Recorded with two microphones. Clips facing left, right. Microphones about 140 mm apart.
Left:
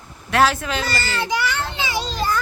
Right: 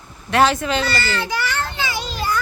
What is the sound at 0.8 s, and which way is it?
Speech, 40° left (ahead or behind).